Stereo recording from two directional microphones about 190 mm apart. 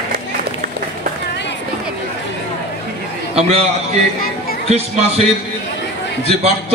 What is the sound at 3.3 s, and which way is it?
A man's voice, 35° right (ahead or behind).